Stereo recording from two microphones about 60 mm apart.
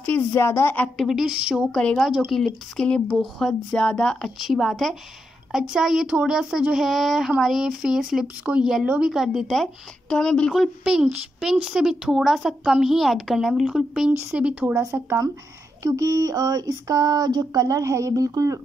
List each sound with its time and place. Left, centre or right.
0.3 s a woman's voice: left
1.0 s speech: centre
1.7 s speech: centre
2.0 s speech: centre
2.3 s speech: centre
3.7 s speech: centre
5.5 s speech: centre
9.5 s speech: centre
10.8 s speech: centre
14.3 s speech: centre
14.8 s speech: right
15.8 s speech: right